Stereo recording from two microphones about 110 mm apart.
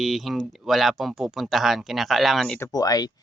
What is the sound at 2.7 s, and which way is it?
Speech, 35° left (ahead or behind).